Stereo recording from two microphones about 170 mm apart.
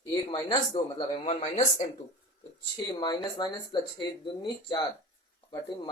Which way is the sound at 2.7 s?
25° left (ahead or behind).